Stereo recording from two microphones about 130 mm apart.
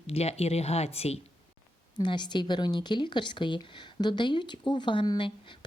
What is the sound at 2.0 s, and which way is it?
Speech, 35° left (ahead or behind).